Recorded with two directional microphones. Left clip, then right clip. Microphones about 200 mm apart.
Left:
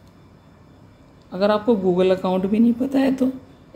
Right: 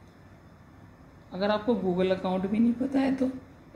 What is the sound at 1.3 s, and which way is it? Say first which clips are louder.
Speech: left 8 dB; 45° left (ahead or behind).